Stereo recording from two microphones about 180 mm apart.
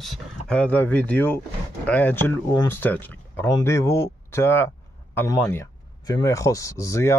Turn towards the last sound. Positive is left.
turn(degrees=15)  # may be behind; listen again after turning